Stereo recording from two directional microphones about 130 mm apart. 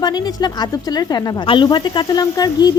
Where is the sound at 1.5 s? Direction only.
35° left (ahead or behind).